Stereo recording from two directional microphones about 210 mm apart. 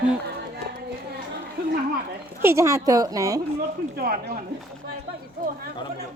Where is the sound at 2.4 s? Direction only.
15° right (ahead or behind).